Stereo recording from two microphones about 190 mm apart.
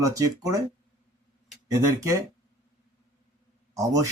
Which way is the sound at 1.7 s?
15° right (ahead or behind).